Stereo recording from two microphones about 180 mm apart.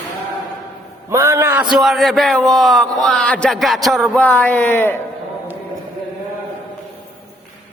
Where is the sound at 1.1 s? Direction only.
15° right (ahead or behind).